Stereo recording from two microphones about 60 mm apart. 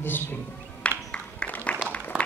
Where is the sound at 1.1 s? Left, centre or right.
Centre.